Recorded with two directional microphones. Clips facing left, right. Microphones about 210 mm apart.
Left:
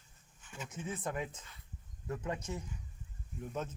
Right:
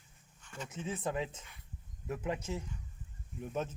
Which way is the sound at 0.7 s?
25° right (ahead or behind).